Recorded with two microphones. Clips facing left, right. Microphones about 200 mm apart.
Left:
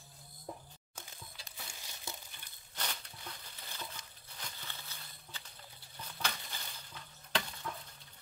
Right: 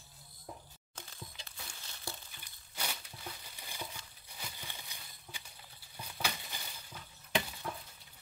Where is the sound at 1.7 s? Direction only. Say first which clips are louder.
Right 2 dB; 15° left (ahead or behind).